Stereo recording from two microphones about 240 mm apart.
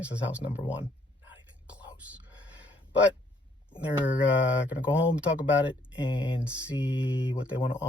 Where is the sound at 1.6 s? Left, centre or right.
Centre.